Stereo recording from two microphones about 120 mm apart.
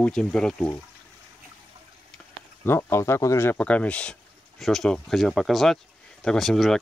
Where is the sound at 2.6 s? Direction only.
20° left (ahead or behind).